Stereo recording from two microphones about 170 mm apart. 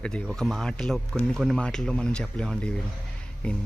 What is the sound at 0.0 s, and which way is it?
Speech, 5° left (ahead or behind).